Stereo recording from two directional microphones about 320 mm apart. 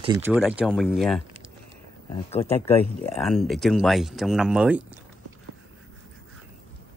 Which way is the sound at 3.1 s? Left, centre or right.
Centre.